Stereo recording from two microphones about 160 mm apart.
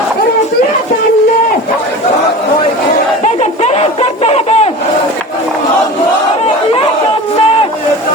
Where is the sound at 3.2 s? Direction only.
45° left (ahead or behind).